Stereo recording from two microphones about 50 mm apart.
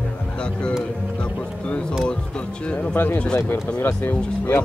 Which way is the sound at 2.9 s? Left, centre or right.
Left.